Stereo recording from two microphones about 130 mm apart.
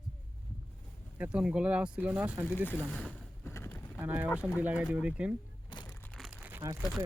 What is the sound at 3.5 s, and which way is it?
Vehicle, 20° left (ahead or behind).